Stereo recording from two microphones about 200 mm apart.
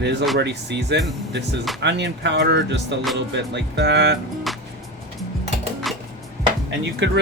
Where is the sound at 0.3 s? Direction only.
60° right (ahead or behind).